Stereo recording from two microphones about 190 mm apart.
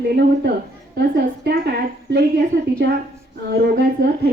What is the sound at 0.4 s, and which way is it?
A woman's voice, 60° right (ahead or behind).